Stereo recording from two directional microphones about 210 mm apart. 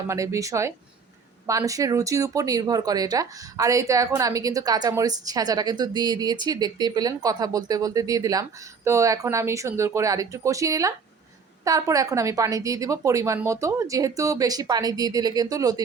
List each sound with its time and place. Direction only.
0.1 s speech: 15° right (ahead or behind)